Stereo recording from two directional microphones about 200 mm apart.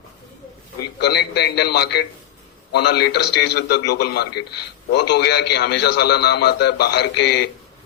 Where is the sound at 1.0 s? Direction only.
55° left (ahead or behind).